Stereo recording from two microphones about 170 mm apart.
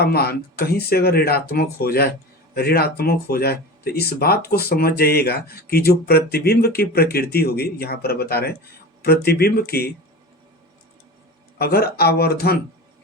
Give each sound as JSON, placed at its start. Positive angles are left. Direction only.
{"t": 0.0, "sound": "speech", "side_deg": 70}
{"t": 11.5, "sound": "speech", "side_deg": 65}